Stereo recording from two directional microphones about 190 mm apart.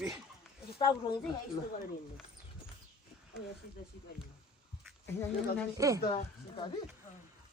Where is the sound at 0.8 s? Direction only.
20° left (ahead or behind).